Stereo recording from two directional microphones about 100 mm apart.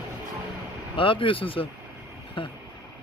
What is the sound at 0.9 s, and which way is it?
Speech, 60° left (ahead or behind).